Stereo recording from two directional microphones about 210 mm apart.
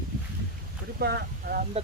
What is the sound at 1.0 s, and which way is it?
Speech, 50° right (ahead or behind).